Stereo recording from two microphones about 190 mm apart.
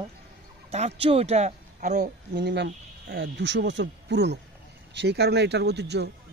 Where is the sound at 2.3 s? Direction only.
65° right (ahead or behind).